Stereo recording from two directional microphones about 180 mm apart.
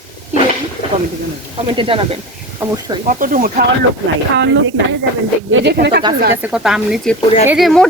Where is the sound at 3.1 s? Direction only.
50° right (ahead or behind).